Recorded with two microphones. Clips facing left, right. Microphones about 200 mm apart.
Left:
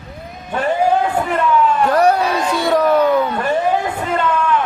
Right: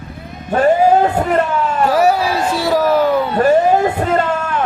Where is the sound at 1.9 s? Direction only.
5° right (ahead or behind).